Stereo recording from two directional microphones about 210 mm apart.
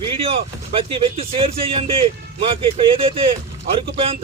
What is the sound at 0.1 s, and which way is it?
A man's voice, 25° right (ahead or behind).